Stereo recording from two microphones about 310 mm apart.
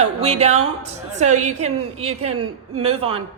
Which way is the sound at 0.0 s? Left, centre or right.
Centre.